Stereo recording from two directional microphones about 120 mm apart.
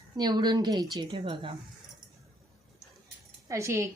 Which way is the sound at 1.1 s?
45° right (ahead or behind).